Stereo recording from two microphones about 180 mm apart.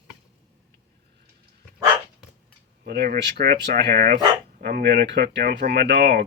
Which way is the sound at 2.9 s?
60° right (ahead or behind).